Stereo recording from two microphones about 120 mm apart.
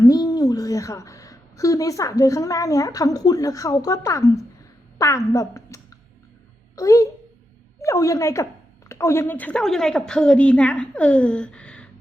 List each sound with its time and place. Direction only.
0.0 s a woman's voice: 30° left (ahead or behind); by 11.9 s 10° left (ahead or behind)